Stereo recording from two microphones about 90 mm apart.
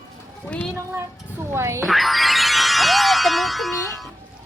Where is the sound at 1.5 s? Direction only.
30° right (ahead or behind).